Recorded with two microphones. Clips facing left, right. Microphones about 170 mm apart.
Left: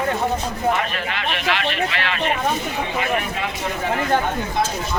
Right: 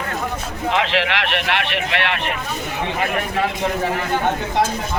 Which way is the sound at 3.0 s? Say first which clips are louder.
Right 2 dB; 50° right (ahead or behind).